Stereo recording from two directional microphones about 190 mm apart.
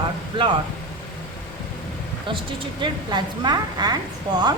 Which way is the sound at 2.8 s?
25° right (ahead or behind).